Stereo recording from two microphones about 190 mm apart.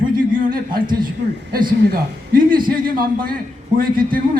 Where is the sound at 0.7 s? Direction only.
25° right (ahead or behind).